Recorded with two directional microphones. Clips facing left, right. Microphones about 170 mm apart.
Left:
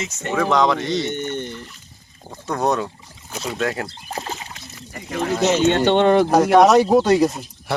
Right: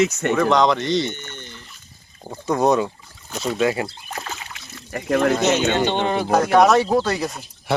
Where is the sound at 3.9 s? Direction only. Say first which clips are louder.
Left 3 dB; 30° left (ahead or behind).